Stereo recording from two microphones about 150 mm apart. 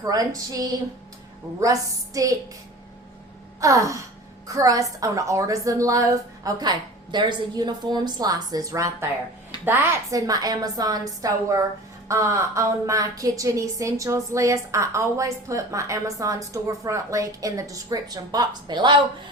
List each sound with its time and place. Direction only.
0.0 s a woman's voice: 25° right (ahead or behind)
3.6 s a woman's voice: 20° right (ahead or behind)